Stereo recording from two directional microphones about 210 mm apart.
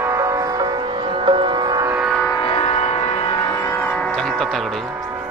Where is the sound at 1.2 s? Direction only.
25° right (ahead or behind).